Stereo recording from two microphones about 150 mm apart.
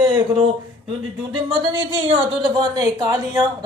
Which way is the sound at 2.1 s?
30° right (ahead or behind).